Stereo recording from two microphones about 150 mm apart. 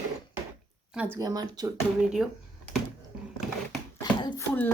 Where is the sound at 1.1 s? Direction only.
25° right (ahead or behind).